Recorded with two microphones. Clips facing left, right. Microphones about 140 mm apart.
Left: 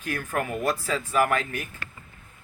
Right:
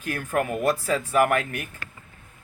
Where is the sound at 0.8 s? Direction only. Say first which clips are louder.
Right 2 dB; 55° right (ahead or behind).